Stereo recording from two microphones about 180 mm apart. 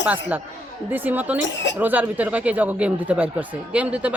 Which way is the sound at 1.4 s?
80° left.